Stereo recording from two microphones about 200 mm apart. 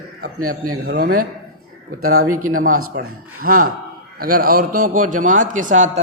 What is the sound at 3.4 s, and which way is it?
A man's voice, 45° right (ahead or behind).